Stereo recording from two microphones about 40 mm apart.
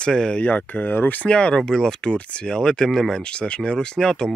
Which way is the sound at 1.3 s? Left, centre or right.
Left.